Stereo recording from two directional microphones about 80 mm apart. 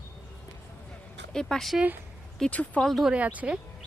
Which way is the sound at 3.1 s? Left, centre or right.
Centre.